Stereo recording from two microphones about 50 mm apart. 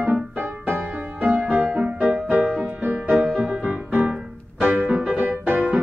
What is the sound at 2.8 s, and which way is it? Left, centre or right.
Music, right.